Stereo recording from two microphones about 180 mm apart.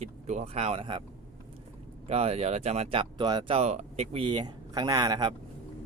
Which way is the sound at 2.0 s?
35° right (ahead or behind).